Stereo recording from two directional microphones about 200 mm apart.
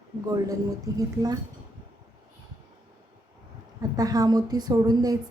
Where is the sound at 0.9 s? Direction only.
20° right (ahead or behind).